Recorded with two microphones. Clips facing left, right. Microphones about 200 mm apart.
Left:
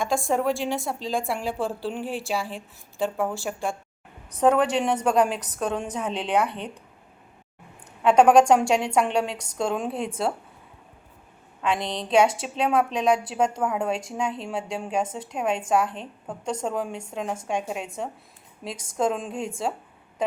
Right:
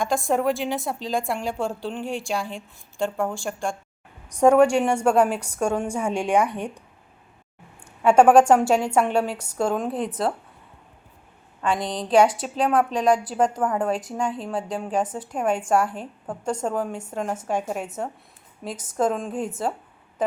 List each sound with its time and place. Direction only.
0.0 s a woman's voice: centre (ahead or behind)
4.3 s a woman's voice: 10° right (ahead or behind)
8.0 s a woman's voice: 5° right (ahead or behind)
11.6 s a woman's voice: centre (ahead or behind)
15.0 s a woman's voice: 25° left (ahead or behind)
15.3 s a woman's voice: 5° right (ahead or behind)